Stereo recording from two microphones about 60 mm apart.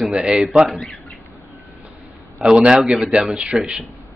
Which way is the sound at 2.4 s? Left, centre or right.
Centre.